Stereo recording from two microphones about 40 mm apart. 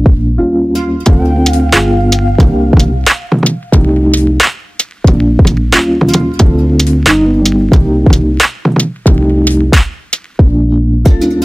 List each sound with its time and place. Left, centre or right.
0.4 s music: left
1.0 s music: centre
3.4 s music: left
4.7 s music: centre
5.3 s music: centre
6.3 s music: centre
7.0 s music: centre
8.4 s music: centre
8.7 s music: left
10.3 s music: centre